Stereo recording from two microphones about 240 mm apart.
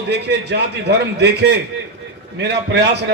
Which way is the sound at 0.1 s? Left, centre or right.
Right.